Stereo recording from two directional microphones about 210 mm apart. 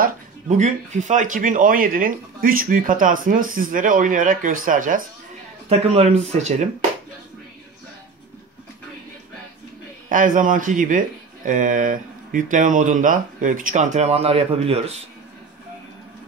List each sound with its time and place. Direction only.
0.0 s speech: 35° right (ahead or behind)
10.0 s speech: 40° right (ahead or behind)